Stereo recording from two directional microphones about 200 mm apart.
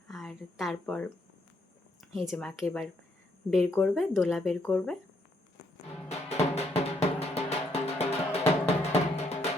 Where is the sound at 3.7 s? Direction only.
5° left (ahead or behind).